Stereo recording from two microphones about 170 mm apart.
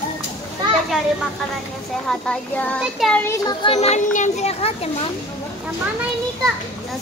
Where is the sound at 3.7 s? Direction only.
40° left (ahead or behind).